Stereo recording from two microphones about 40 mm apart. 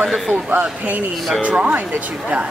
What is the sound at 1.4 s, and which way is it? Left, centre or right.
Speech, right.